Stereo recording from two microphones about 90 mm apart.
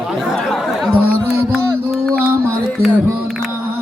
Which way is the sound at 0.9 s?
20° right (ahead or behind).